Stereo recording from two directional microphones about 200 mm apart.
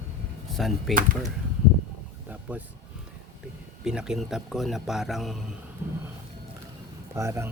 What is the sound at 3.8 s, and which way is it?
Speech, 5° right (ahead or behind).